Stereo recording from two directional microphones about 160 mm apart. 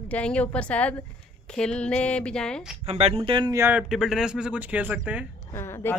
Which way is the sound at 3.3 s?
30° right (ahead or behind).